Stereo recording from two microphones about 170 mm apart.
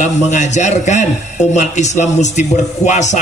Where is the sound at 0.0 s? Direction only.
45° left (ahead or behind).